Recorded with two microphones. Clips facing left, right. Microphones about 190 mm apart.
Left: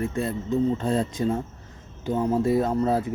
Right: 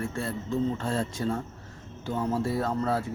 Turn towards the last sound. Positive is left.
turn(degrees=15)  # may be behind; listen again after turning